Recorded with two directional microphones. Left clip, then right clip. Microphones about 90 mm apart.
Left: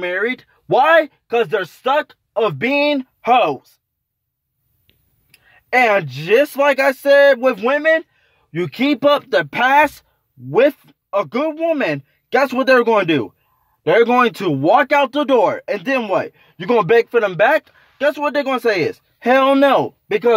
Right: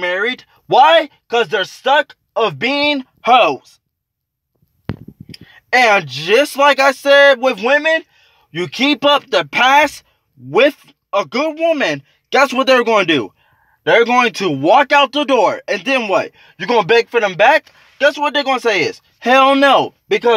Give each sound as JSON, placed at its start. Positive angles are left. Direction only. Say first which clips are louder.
{"t": 0.0, "sound": "a sound", "louder": "right 2 dB", "side_deg": 45}
{"t": 0.7, "sound": "speech", "louder": "right 3 dB", "side_deg": 30}
{"t": 3.3, "sound": "speech", "louder": "right 5 dB", "side_deg": 15}
{"t": 5.5, "sound": "speech", "louder": "right 3 dB", "side_deg": 30}
{"t": 14.6, "sound": "speech", "louder": "right 3 dB", "side_deg": 30}
{"t": 14.9, "sound": "speech", "louder": "right 3 dB", "side_deg": 45}
{"t": 15.1, "sound": "speech", "louder": "right 1 dB", "side_deg": 30}